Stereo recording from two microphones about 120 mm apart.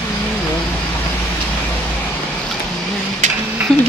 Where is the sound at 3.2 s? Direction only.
85° right.